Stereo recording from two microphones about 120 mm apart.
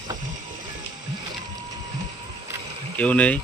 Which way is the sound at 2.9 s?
10° left (ahead or behind).